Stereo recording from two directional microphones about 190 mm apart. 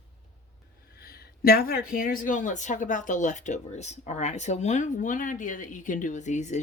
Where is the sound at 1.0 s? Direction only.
55° left (ahead or behind); by 6.6 s 40° left (ahead or behind).